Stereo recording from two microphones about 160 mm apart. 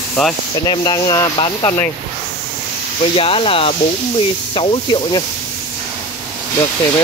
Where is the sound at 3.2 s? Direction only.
35° left (ahead or behind).